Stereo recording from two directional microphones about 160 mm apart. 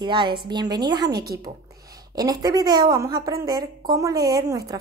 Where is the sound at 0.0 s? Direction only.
30° right (ahead or behind).